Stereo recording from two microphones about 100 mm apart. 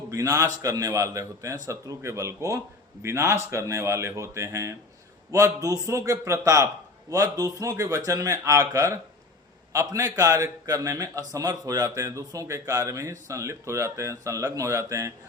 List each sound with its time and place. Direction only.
0.1 s a man's voice: 35° right (ahead or behind)